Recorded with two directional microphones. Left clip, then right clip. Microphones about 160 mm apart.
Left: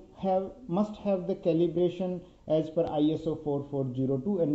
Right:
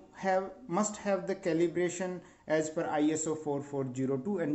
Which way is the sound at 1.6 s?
45° right (ahead or behind).